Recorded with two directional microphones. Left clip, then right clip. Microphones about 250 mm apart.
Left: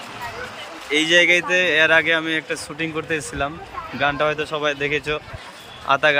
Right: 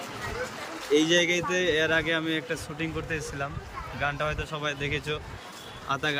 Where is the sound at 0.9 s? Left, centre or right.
Centre.